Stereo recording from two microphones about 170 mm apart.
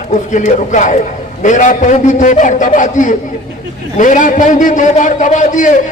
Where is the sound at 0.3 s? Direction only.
45° left (ahead or behind).